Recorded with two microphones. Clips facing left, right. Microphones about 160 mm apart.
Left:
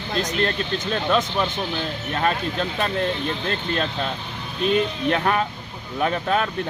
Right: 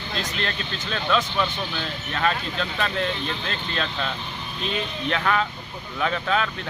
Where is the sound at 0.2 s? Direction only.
45° left (ahead or behind).